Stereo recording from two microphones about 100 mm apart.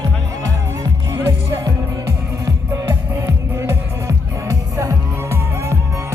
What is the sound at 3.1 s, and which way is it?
Music, 30° right (ahead or behind).